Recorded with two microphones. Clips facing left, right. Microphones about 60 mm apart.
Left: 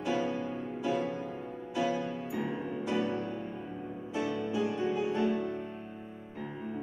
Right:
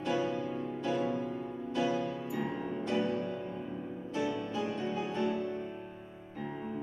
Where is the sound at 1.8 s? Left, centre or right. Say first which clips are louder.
Left 1 dB; centre.